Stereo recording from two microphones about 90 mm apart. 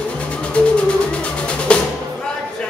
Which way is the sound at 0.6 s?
15° left (ahead or behind).